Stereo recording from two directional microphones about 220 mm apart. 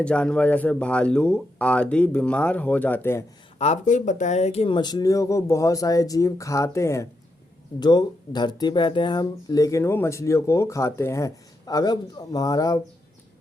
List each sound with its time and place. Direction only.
0.0 s speech: 5° left (ahead or behind)
3.6 s speech: 35° left (ahead or behind); by 12.8 s 15° left (ahead or behind)